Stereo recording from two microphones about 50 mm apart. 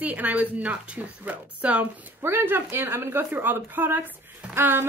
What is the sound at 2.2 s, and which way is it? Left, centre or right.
A woman's voice, right.